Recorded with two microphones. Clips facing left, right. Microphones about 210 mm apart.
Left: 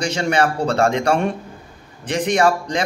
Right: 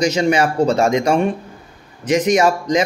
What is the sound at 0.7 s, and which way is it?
Speech, 10° right (ahead or behind).